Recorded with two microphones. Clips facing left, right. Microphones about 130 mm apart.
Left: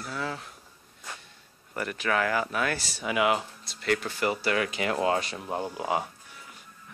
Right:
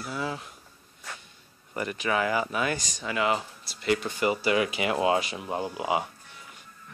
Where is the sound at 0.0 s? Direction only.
10° right (ahead or behind).